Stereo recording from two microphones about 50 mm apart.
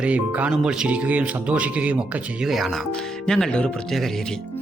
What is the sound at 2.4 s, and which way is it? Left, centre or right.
Speech, centre.